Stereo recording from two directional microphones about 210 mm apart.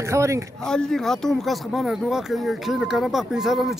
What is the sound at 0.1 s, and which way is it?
Speech, 15° right (ahead or behind).